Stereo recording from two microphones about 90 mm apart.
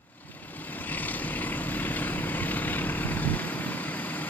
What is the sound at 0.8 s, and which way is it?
Vehicle, 20° left (ahead or behind).